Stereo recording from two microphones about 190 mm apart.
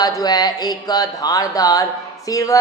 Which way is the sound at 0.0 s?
20° left (ahead or behind).